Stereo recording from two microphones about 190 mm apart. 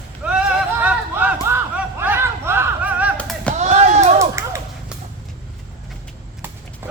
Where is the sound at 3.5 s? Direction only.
35° right (ahead or behind).